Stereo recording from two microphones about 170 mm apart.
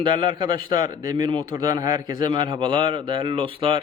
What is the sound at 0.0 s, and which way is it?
A man's voice, 30° right (ahead or behind).